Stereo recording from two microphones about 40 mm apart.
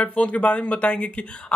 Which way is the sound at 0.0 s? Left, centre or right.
Left.